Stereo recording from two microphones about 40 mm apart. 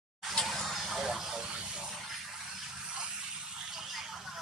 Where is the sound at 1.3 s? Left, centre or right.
Right.